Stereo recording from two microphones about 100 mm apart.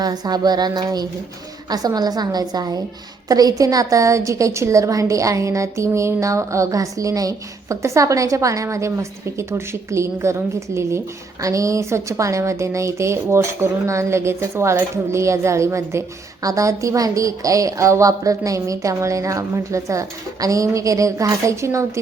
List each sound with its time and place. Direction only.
0.0 s a woman's voice: 45° right (ahead or behind)